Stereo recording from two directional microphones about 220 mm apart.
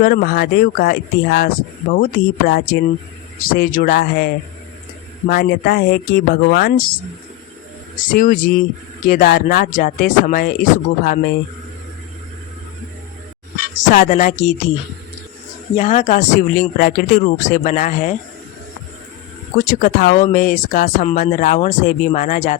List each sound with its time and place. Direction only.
0.0 s speech: 40° left (ahead or behind)
5.3 s speech: 45° left (ahead or behind)
8.0 s speech: 40° left (ahead or behind)
13.9 s speech: 40° left (ahead or behind)
15.7 s speech: 30° left (ahead or behind)
19.6 s speech: 40° left (ahead or behind)